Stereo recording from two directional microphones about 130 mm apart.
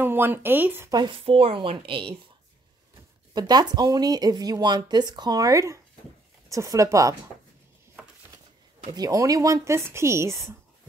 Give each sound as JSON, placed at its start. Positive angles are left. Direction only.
{"t": 0.0, "sound": "speech", "side_deg": -15}
{"t": 0.9, "sound": "a woman's voice", "side_deg": -40}
{"t": 3.3, "sound": "speech", "side_deg": -35}
{"t": 8.9, "sound": "speech", "side_deg": -30}